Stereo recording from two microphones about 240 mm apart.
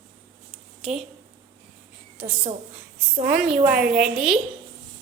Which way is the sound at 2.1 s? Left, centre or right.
Right.